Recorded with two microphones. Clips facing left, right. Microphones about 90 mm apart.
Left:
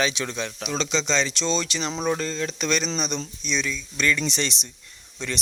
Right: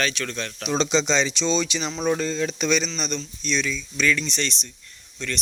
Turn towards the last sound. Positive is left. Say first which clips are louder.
# even
turn(degrees=20)  # may be behind; listen again after turning